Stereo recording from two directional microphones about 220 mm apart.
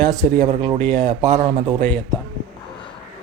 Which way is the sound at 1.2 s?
30° right (ahead or behind).